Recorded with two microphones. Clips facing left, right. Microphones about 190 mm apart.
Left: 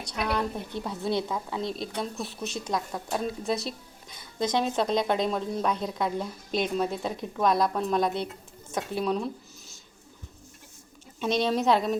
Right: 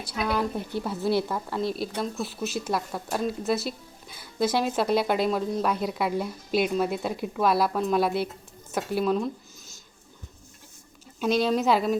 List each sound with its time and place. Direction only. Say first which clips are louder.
0.0 s a woman's voice: right 2 dB; 5° right (ahead or behind)
11.2 s a woman's voice: right 2 dB; 5° right (ahead or behind)